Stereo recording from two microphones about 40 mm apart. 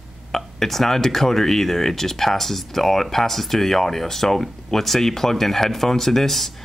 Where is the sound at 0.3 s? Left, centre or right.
Centre.